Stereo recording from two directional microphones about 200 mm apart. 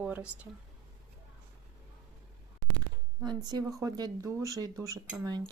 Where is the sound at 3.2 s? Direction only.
20° right (ahead or behind).